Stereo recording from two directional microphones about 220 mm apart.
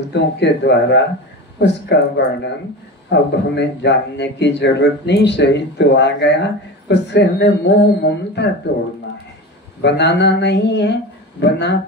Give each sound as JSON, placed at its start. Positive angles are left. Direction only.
{"t": 0.1, "sound": "a man's voice", "side_deg": 50}